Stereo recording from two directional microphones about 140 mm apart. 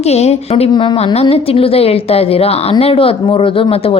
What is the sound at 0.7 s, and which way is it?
A woman's voice, 35° left (ahead or behind).